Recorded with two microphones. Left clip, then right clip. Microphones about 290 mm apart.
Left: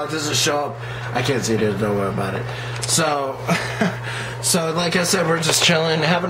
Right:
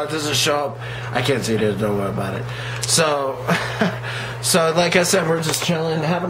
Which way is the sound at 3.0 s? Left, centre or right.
Centre.